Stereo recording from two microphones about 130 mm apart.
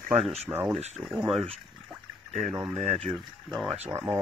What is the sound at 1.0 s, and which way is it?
Speech, 30° right (ahead or behind).